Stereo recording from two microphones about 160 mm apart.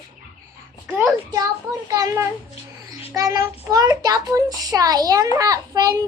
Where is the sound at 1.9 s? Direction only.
25° right (ahead or behind).